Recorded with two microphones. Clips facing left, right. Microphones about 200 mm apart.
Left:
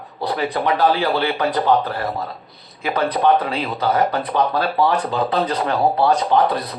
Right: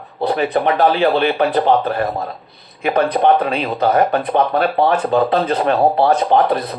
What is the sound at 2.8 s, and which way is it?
Speech, 60° right (ahead or behind).